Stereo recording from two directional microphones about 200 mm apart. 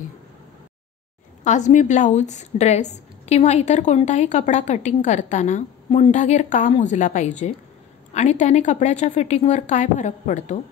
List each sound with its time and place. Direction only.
1.4 s a woman's voice: 35° left (ahead or behind)